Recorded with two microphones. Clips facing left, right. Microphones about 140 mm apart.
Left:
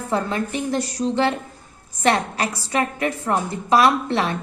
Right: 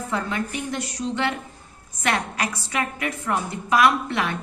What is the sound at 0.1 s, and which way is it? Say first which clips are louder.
A woman's voice: left 5 dB; 35° left (ahead or behind).